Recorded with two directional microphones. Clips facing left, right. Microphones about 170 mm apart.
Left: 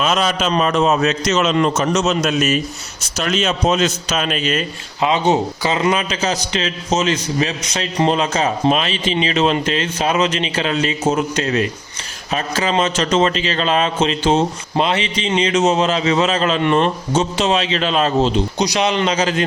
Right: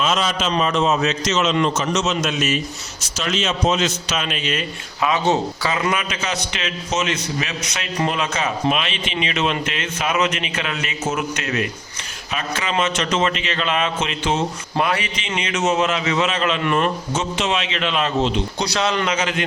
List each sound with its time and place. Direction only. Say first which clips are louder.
0.0 s a man's voice: left 3 dB; 60° left (ahead or behind); by 4.6 s 40° left (ahead or behind)
4.9 s a man's voice: left 3 dB; 25° left (ahead or behind)
18.6 s a man's voice: left 3 dB; 15° left (ahead or behind)
19.0 s a man's voice: left 4 dB; 35° left (ahead or behind)